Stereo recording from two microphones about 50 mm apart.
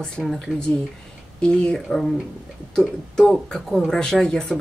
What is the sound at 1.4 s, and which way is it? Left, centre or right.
Speech, centre.